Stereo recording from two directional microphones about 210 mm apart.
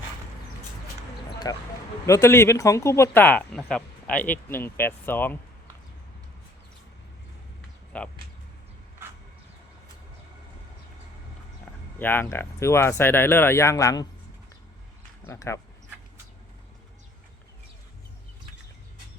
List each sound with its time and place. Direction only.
1.5 s speech: 15° left (ahead or behind)
7.9 s speech: 5° left (ahead or behind)
11.9 s speech: 10° left (ahead or behind)
15.3 s speech: 15° left (ahead or behind)